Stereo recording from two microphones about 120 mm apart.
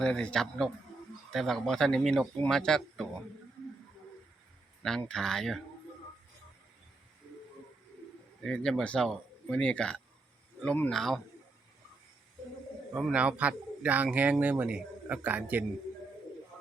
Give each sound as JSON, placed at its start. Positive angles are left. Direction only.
{"t": 0.0, "sound": "a man's voice", "side_deg": 5}
{"t": 4.8, "sound": "speech", "side_deg": 5}
{"t": 8.4, "sound": "speech", "side_deg": 5}
{"t": 12.9, "sound": "speech", "side_deg": -5}